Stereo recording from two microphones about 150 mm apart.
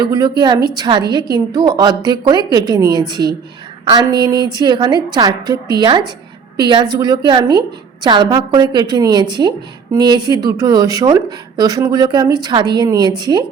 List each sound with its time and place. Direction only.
0.0 s a woman's voice: 25° right (ahead or behind)